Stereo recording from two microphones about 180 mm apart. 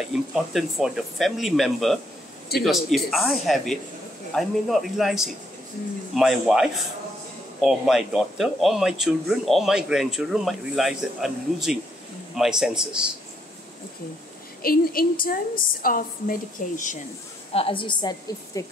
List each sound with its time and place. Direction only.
0.0 s speech: centre (ahead or behind)
14.6 s a woman's voice: 55° left (ahead or behind)
17.5 s a woman's voice: 30° left (ahead or behind)